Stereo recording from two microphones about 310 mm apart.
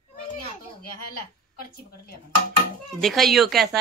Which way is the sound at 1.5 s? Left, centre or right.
Left.